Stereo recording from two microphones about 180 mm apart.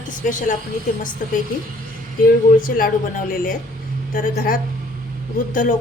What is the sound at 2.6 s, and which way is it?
A woman's voice, 50° left (ahead or behind).